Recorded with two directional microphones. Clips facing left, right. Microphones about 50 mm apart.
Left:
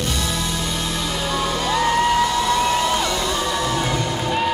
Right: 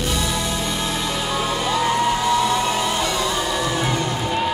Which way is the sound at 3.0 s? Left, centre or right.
Centre.